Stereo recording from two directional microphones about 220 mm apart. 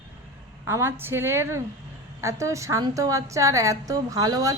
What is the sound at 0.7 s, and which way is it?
A woman's voice, 10° right (ahead or behind).